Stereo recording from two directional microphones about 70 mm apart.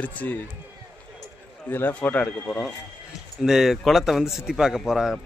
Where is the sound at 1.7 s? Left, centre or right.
Left.